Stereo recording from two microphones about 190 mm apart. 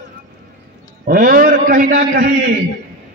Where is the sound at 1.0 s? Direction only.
50° right (ahead or behind).